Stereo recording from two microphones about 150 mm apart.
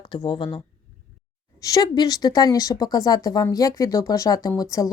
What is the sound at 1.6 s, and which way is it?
Speech, 25° left (ahead or behind).